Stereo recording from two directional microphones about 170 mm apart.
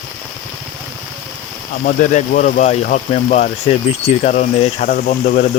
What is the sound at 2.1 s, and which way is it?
Speech, 50° left (ahead or behind).